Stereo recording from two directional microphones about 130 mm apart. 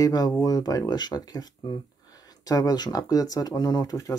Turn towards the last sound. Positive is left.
turn(degrees=30)  # may be behind; listen again after turning